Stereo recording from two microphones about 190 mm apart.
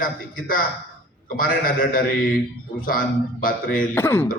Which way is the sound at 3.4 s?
45° left (ahead or behind).